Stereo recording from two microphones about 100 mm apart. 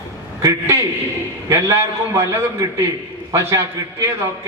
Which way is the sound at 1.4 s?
25° right (ahead or behind).